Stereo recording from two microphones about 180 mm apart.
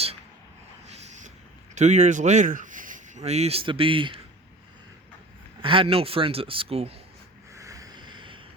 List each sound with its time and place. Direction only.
1.7 s speech: 40° right (ahead or behind)
5.6 s speech: 30° right (ahead or behind)
7.5 s a sound: 15° right (ahead or behind)